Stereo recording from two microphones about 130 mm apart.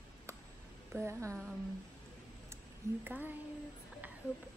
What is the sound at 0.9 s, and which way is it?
Speech, 20° right (ahead or behind).